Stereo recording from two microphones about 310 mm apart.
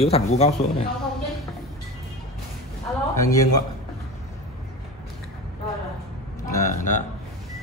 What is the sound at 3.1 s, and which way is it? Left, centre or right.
Speech, centre.